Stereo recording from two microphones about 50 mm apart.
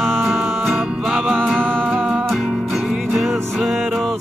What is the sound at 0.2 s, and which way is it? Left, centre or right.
Music, centre.